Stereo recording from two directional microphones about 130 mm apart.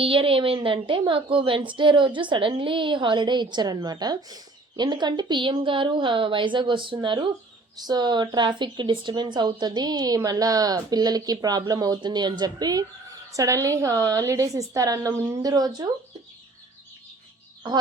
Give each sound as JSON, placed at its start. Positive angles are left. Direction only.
{"t": 0.0, "sound": "a woman's voice", "side_deg": -45}